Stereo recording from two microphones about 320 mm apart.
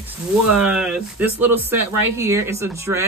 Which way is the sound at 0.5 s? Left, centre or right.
Centre.